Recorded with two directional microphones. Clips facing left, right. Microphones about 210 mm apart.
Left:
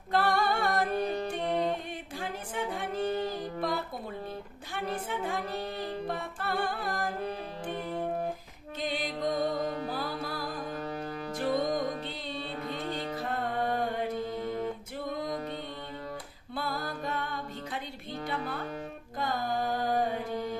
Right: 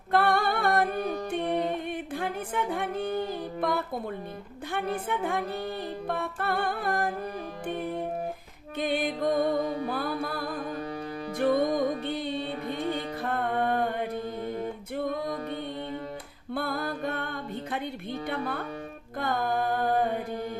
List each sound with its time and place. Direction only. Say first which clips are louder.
0.1 s a capella: right 3 dB; 55° right (ahead or behind)
1.9 s singing: right 6 dB; 55° right (ahead or behind)
4.7 s music: right 4 dB; 55° right (ahead or behind)
8.8 s music: right 5 dB; 55° right (ahead or behind)
11.3 s music: right 5 dB; 55° right (ahead or behind)
13.2 s mantra: right 5 dB; 55° right (ahead or behind)
16.6 s music: right 4 dB; 55° right (ahead or behind)